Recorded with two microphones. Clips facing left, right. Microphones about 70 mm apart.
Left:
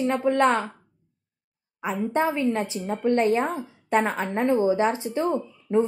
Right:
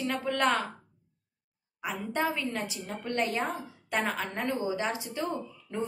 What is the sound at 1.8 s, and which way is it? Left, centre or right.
A woman's voice, left.